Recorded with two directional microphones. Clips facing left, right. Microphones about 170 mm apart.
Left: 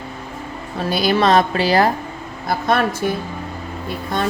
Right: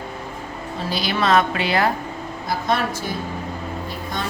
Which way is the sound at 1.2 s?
35° left (ahead or behind).